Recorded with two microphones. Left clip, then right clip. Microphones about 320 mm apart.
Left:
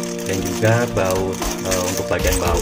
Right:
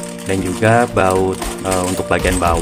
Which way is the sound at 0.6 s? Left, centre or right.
Centre.